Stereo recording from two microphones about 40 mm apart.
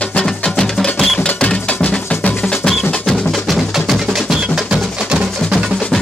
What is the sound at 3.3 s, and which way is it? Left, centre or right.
Music, centre.